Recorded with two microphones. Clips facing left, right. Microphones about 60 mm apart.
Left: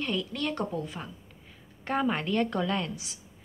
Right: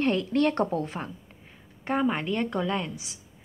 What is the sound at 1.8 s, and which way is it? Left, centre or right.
A woman's voice, centre.